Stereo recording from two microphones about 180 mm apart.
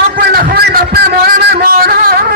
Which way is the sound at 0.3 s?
60° right (ahead or behind).